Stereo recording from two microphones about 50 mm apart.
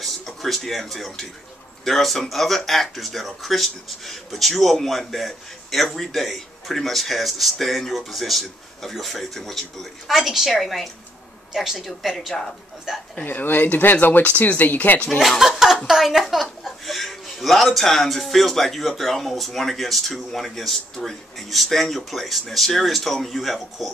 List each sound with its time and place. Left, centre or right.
0.0 s speech: centre
13.2 s speech: left
15.1 s speech: centre